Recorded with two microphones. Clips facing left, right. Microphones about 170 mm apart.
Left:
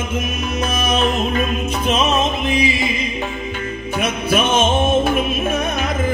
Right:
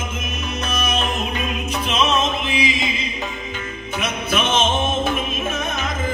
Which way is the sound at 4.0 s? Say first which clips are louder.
Left 4 dB; 50° left (ahead or behind).